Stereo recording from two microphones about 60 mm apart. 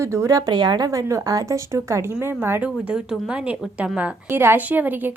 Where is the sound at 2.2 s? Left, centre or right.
Right.